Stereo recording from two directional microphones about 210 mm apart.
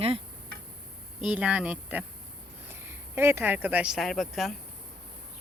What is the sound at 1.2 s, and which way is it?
Speech, 5° right (ahead or behind).